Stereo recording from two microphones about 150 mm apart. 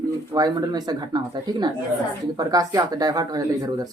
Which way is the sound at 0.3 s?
25° right (ahead or behind).